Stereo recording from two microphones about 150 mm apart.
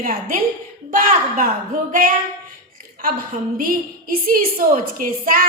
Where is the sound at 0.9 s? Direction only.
65° right (ahead or behind).